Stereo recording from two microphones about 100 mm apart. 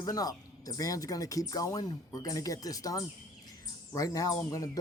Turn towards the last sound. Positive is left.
turn(degrees=35)  # may be behind; listen again after turning